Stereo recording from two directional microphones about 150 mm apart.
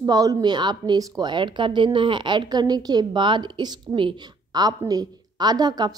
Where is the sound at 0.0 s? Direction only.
25° right (ahead or behind).